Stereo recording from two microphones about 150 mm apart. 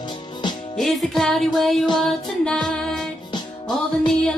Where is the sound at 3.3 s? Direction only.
30° left (ahead or behind).